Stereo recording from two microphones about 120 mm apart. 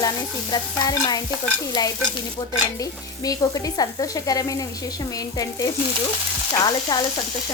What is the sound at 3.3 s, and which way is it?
Frying, 30° left (ahead or behind).